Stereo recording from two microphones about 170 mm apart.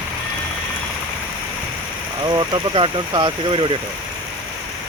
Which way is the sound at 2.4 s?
30° right (ahead or behind).